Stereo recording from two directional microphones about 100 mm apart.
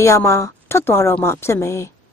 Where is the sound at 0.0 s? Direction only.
30° left (ahead or behind).